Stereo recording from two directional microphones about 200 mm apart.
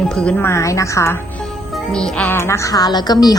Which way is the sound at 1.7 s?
5° left (ahead or behind).